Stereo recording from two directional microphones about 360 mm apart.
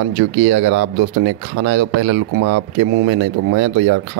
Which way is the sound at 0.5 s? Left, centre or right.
Right.